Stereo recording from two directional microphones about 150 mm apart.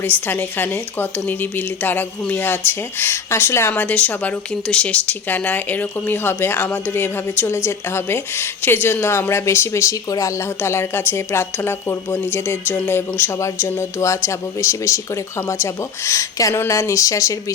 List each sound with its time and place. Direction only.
0.0 s speech: 15° left (ahead or behind)